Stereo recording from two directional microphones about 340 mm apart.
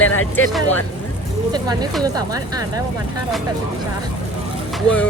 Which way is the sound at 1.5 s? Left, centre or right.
Centre.